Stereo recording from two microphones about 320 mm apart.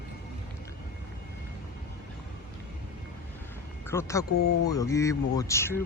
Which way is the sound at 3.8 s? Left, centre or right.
Centre.